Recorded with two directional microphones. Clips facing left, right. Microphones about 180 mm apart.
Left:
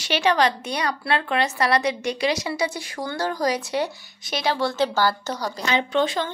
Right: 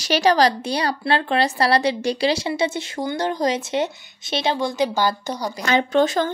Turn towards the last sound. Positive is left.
turn(degrees=-45)  # may be behind; listen again after turning